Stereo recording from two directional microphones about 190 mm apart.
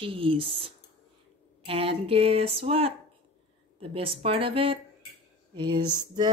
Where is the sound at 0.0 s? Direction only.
30° right (ahead or behind).